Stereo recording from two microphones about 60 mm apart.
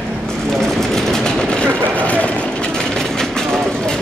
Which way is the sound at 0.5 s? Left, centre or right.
Centre.